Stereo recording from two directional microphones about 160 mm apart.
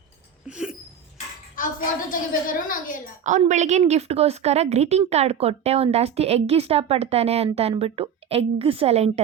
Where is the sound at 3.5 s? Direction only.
45° right (ahead or behind).